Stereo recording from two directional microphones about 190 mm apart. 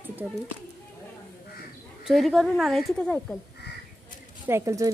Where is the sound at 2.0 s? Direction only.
Centre (ahead or behind).